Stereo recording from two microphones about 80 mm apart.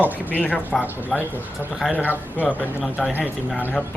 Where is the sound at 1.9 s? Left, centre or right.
Centre.